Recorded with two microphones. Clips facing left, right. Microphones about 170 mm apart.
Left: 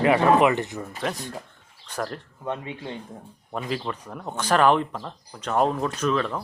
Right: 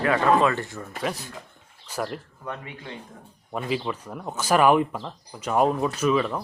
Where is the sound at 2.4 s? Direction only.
25° left (ahead or behind).